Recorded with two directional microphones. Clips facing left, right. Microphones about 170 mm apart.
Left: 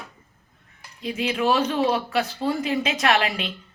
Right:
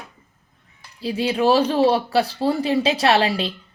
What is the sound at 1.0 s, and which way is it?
Speech, 35° right (ahead or behind).